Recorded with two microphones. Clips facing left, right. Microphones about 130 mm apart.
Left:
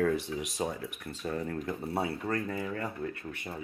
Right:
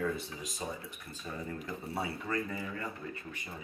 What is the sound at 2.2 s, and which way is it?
Speech, 55° left (ahead or behind).